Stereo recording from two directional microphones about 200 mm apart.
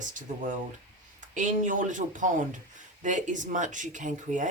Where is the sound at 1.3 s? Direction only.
40° right (ahead or behind).